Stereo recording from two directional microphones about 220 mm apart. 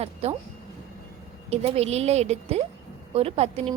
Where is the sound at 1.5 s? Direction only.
30° right (ahead or behind).